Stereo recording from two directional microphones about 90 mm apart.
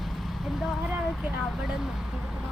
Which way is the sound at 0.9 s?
10° right (ahead or behind).